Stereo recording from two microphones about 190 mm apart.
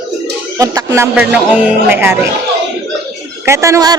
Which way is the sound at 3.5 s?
15° right (ahead or behind).